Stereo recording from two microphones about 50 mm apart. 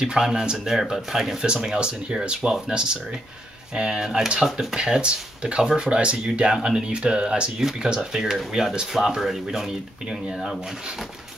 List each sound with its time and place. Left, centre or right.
0.0 s speech: centre
1.4 s speech: centre
4.7 s speech: centre
10.3 s speech: centre